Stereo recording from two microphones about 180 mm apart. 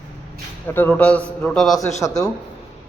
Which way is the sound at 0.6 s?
10° left (ahead or behind).